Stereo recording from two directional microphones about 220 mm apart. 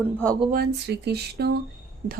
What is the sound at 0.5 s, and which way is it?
Speech, 45° right (ahead or behind).